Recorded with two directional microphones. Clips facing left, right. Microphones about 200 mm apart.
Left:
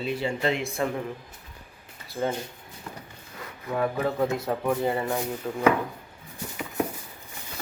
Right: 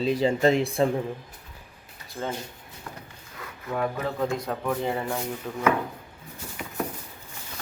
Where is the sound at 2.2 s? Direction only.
10° left (ahead or behind).